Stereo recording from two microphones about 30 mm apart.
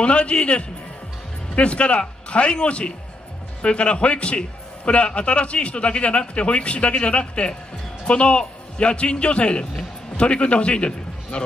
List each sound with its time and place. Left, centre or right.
0.0 s a man's voice: left